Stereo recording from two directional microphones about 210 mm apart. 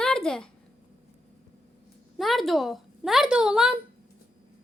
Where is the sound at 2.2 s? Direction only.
Centre (ahead or behind).